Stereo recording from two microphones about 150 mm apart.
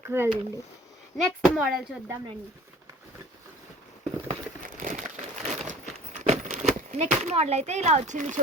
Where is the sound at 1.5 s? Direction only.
5° right (ahead or behind).